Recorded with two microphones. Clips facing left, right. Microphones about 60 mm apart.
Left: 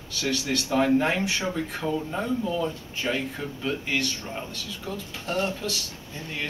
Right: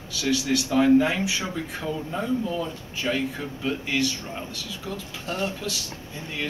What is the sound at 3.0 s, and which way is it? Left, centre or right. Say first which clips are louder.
Speech: right 1 dB; centre.